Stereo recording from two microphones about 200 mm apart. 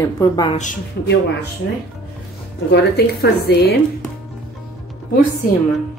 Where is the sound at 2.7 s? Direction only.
55° left (ahead or behind).